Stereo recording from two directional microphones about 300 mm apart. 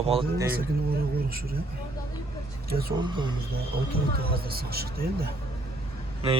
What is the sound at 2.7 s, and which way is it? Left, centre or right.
Speech, right.